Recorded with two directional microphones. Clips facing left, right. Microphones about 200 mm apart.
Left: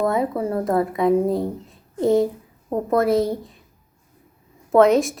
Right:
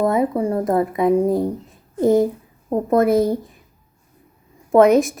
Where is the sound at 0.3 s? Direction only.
15° right (ahead or behind).